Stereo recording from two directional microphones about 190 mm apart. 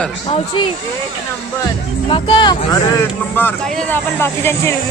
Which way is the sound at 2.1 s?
25° left (ahead or behind).